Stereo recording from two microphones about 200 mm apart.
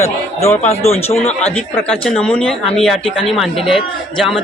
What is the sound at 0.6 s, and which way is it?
Speech, 30° left (ahead or behind).